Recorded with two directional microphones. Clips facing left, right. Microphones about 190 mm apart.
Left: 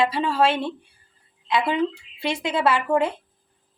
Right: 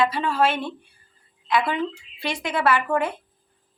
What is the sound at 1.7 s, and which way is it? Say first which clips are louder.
A woman's voice: left 3 dB; 25° left (ahead or behind).